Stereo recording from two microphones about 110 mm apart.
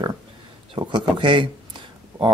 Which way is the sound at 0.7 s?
45° right (ahead or behind).